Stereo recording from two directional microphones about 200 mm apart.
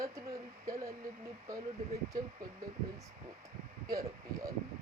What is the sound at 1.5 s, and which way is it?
Speech, 15° right (ahead or behind).